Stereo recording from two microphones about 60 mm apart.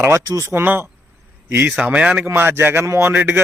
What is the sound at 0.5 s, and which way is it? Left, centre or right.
Speech, right.